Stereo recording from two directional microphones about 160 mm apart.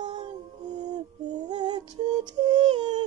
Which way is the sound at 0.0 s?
25° right (ahead or behind).